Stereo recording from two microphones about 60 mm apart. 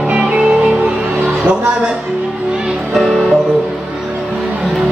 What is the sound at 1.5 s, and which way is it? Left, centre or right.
Speech, centre.